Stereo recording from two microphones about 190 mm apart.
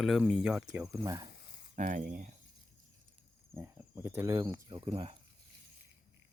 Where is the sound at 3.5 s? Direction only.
10° right (ahead or behind); by 5.1 s 30° right (ahead or behind).